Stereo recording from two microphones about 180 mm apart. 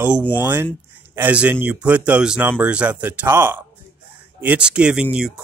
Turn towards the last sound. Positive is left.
turn(degrees=-5)  # may be behind; listen again after turning